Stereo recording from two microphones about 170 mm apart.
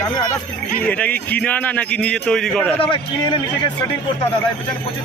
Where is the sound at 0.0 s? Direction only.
25° left (ahead or behind).